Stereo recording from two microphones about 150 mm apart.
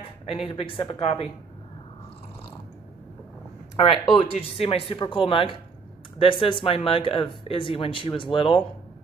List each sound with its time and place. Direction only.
0.0 s speech: 40° left (ahead or behind)
4.2 s speech: 40° left (ahead or behind)